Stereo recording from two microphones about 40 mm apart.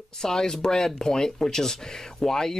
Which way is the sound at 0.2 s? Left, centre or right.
Centre.